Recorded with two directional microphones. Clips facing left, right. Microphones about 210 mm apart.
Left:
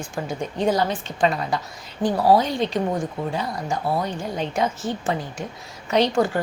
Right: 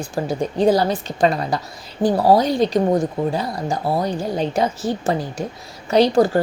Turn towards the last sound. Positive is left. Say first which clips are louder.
# right 5 dB
turn(degrees=-35)  # may be behind; listen again after turning